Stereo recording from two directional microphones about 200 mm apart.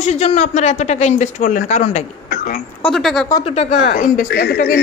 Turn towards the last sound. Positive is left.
turn(degrees=45)  # may be behind; listen again after turning